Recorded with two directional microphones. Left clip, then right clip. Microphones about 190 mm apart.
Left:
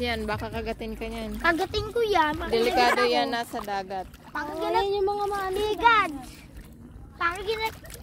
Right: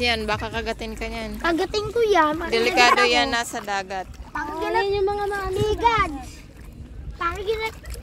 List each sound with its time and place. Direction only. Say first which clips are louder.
0.0 s speech: right 6 dB; 10° left (ahead or behind)
1.4 s speech: right 2 dB; 40° right (ahead or behind)
2.5 s speech: right 5 dB; 15° left (ahead or behind)
4.3 s a child's voice: right 3 dB; 10° right (ahead or behind)
5.0 s speech: right 3 dB; 20° left (ahead or behind)
5.7 s a child's voice: even; 5° right (ahead or behind)
7.2 s speech: right 2 dB; 10° left (ahead or behind)